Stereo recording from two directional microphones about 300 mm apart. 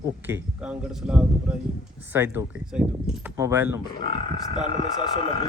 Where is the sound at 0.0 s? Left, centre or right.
Centre.